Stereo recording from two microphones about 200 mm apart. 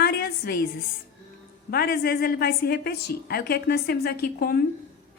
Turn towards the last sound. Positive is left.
turn(degrees=50)  # may be behind; listen again after turning